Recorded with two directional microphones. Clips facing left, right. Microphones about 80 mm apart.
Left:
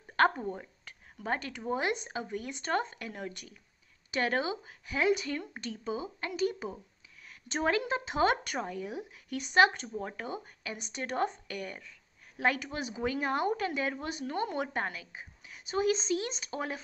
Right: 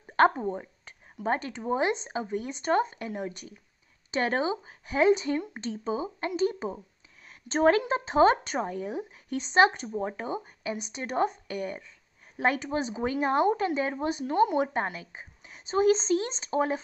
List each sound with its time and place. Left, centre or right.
0.1 s speech: right